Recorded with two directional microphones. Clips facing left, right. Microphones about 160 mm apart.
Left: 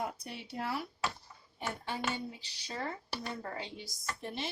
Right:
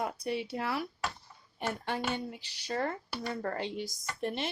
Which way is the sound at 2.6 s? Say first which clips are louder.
Right 6 dB; 60° right (ahead or behind).